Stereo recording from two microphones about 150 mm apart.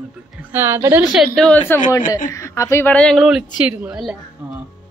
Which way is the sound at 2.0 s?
65° left (ahead or behind).